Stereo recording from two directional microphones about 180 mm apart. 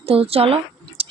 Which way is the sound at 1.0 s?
35° right (ahead or behind).